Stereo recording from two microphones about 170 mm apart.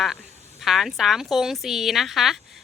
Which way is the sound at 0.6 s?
Centre (ahead or behind).